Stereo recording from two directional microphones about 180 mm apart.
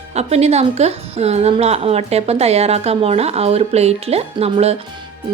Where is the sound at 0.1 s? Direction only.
35° right (ahead or behind).